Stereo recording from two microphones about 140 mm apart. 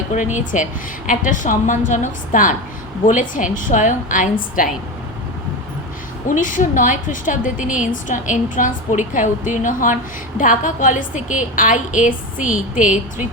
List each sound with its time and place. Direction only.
0.1 s a woman's voice: 60° left (ahead or behind); by 4.7 s 75° left (ahead or behind)
6.2 s a woman's voice: 70° left (ahead or behind)